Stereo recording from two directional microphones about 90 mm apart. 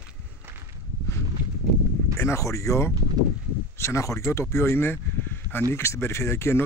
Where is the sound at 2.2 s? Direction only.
35° left (ahead or behind).